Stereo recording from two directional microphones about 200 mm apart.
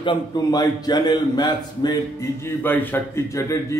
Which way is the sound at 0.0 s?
20° left (ahead or behind).